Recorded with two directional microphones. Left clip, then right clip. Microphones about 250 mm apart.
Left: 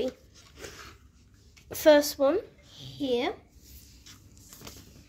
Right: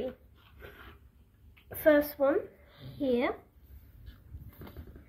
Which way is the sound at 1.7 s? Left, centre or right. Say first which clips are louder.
Left 5 dB; left.